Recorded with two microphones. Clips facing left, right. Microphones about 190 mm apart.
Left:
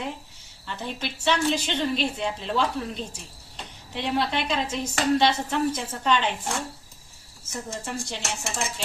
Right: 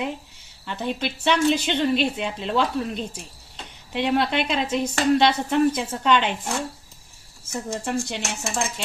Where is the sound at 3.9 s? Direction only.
60° right (ahead or behind).